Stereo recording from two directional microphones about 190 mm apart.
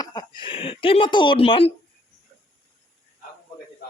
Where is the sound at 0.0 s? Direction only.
20° left (ahead or behind).